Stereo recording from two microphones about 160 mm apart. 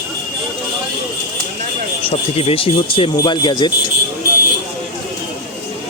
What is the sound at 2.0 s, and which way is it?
Speech, 35° left (ahead or behind).